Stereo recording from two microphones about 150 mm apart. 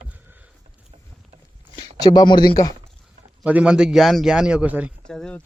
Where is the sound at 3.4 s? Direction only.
10° right (ahead or behind).